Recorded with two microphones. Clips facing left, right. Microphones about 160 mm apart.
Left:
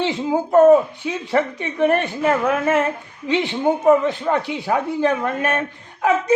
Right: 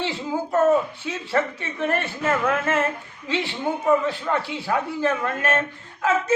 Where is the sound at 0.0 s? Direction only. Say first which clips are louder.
Left 6 dB; 20° left (ahead or behind).